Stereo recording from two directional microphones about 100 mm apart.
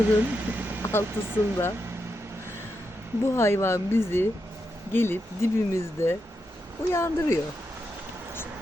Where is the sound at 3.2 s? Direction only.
25° left (ahead or behind).